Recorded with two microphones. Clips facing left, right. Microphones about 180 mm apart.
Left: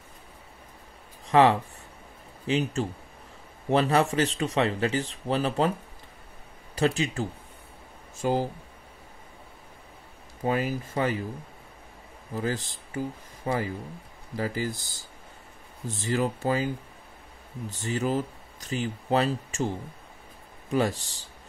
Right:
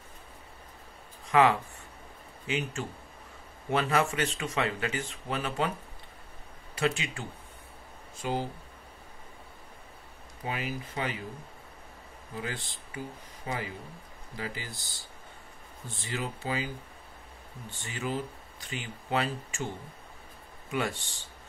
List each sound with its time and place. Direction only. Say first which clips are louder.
1.2 s speech: left 4 dB; 35° left (ahead or behind)
6.7 s speech: left 5 dB; 35° left (ahead or behind)
10.4 s speech: left 8 dB; 45° left (ahead or behind)
12.4 s speech: left 7 dB; 40° left (ahead or behind)
15.9 s speech: left 9 dB; 45° left (ahead or behind)
17.6 s speech: left 7 dB; 40° left (ahead or behind)
20.7 s speech: left 6 dB; 35° left (ahead or behind)